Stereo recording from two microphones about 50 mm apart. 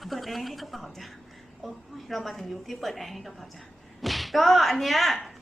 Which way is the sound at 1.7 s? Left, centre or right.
Centre.